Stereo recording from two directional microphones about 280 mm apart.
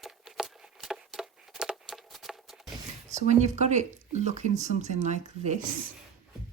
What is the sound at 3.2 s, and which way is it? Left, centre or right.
Speech, right.